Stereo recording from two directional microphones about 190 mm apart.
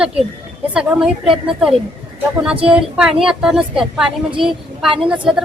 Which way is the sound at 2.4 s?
5° right (ahead or behind).